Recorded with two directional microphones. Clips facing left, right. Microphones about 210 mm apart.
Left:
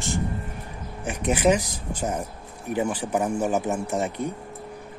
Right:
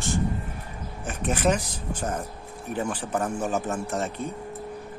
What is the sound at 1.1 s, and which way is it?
Speech, 10° left (ahead or behind).